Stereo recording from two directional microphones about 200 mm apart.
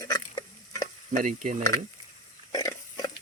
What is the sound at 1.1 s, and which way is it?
Speech, 40° right (ahead or behind).